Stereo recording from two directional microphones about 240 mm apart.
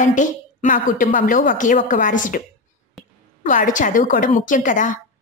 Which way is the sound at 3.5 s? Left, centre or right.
Left.